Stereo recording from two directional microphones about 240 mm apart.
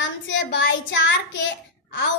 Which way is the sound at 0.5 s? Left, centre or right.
Left.